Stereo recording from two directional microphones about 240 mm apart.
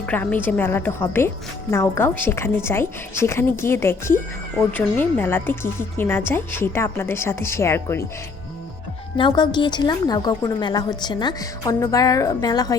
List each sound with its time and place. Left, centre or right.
0.0 s a woman's voice: centre
9.1 s a woman's voice: centre